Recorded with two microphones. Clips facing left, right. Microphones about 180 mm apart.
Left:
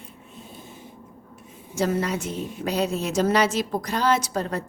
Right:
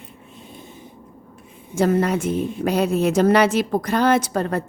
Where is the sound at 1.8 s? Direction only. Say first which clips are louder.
Right 6 dB; 55° right (ahead or behind).